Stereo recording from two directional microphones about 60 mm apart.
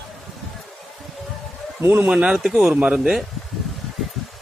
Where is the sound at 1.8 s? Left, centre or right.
Right.